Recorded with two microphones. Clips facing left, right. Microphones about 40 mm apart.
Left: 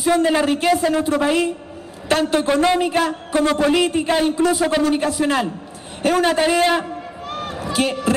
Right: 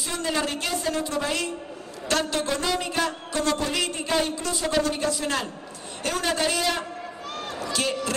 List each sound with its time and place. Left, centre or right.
0.2 s a man's voice: left
3.0 s a man's voice: centre
6.8 s a sound: centre